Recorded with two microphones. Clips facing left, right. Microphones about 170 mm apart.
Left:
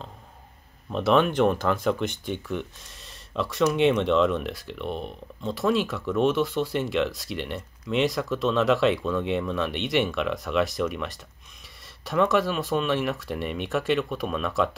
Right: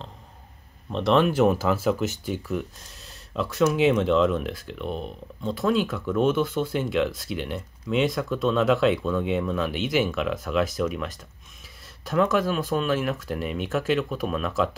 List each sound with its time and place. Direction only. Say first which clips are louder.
0.9 s speech: right 1 dB; centre (ahead or behind)